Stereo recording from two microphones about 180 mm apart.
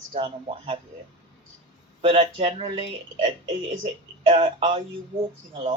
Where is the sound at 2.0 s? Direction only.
35° right (ahead or behind).